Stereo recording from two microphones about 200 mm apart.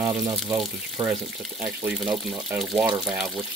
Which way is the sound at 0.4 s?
Centre (ahead or behind).